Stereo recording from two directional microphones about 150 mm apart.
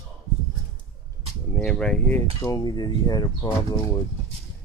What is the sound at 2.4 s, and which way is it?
Speech, 25° left (ahead or behind).